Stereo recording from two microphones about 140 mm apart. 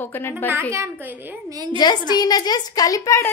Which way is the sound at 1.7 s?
30° left (ahead or behind).